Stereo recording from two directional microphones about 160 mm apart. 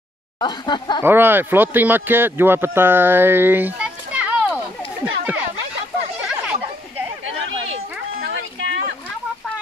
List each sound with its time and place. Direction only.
0.4 s speech: 30° left (ahead or behind)
1.0 s speech: 15° right (ahead or behind)
5.0 s a sound: 10° right (ahead or behind)